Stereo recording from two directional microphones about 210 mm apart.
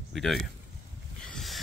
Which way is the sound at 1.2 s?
Centre (ahead or behind).